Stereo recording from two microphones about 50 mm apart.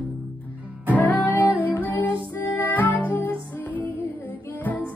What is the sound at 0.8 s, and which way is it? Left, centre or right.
Music, left.